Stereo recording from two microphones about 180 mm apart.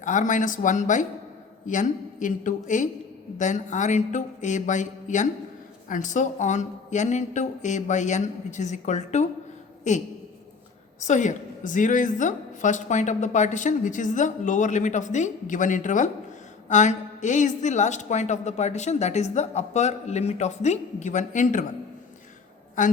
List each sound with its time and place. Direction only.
0.0 s a woman's voice: 45° left (ahead or behind)
11.0 s a woman's voice: 40° left (ahead or behind)
22.8 s a woman's voice: 45° left (ahead or behind)